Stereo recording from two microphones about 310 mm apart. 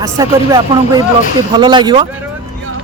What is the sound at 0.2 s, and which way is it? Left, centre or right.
A man's voice, centre.